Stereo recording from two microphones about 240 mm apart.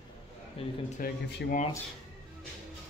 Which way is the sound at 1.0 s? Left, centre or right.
Left.